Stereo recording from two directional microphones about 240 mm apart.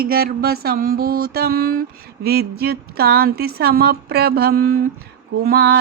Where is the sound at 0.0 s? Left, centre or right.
Right.